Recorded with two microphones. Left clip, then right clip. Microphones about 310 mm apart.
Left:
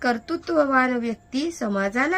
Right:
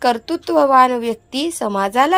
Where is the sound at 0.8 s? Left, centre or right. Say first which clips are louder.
Right 9 dB; centre.